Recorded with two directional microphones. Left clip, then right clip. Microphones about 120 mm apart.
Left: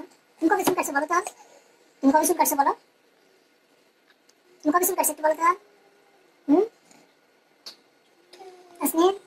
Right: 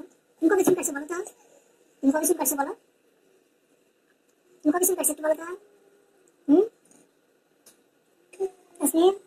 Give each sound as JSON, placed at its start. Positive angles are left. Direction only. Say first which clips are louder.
{"t": 0.0, "sound": "a sound", "louder": "right 1 dB", "side_deg": 35}
{"t": 0.9, "sound": "a child's voice", "louder": "left 9 dB", "side_deg": 30}
{"t": 2.0, "sound": "a child's voice", "louder": "left 4 dB", "side_deg": 30}
{"t": 4.6, "sound": "a child's voice", "louder": "left 2 dB", "side_deg": 35}
{"t": 6.4, "sound": "a sound", "louder": "right 1 dB", "side_deg": 30}
{"t": 8.7, "sound": "speech", "louder": "even", "side_deg": 30}